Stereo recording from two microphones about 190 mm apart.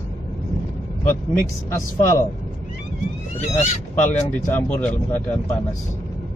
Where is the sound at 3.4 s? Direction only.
40° left (ahead or behind).